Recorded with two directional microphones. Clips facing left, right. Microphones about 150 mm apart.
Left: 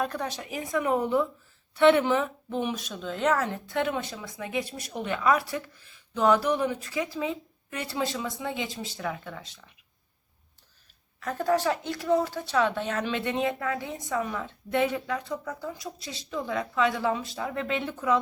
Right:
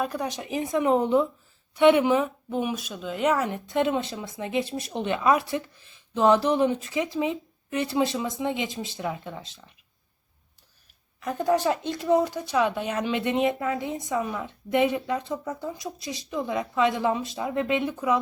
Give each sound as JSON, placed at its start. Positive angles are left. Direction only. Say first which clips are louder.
{"t": 0.0, "sound": "a woman's voice", "louder": "right 2 dB", "side_deg": -10}
{"t": 11.2, "sound": "speech", "louder": "right 2 dB", "side_deg": -15}